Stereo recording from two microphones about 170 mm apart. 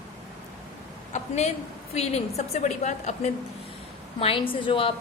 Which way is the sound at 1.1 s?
40° left (ahead or behind).